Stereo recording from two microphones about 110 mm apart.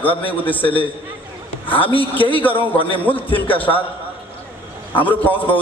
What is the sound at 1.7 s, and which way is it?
A man's voice, 55° left (ahead or behind).